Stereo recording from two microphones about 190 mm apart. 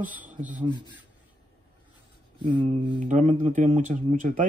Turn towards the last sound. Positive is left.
turn(degrees=-45)  # may be behind; listen again after turning